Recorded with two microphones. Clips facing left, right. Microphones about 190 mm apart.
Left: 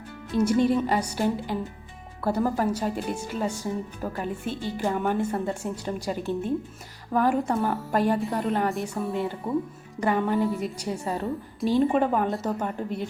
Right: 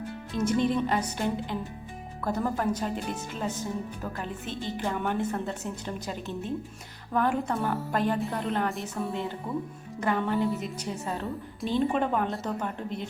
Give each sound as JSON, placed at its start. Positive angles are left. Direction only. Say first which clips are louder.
{"t": 0.3, "sound": "a woman's voice", "louder": "left 4 dB", "side_deg": 10}
{"t": 9.5, "sound": "speech", "louder": "left 6 dB", "side_deg": 25}
{"t": 10.0, "sound": "a woman's voice", "louder": "left 3 dB", "side_deg": 10}
{"t": 11.6, "sound": "a woman's voice", "louder": "left 5 dB", "side_deg": 0}